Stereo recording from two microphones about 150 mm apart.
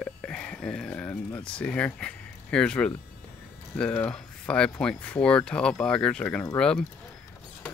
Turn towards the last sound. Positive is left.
turn(degrees=5)  # may be behind; listen again after turning